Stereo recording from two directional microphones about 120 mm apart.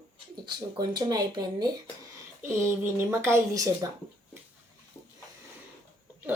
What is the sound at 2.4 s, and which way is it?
Speech, 20° right (ahead or behind).